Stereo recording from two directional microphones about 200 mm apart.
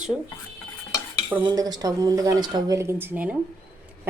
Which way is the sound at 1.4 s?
20° right (ahead or behind).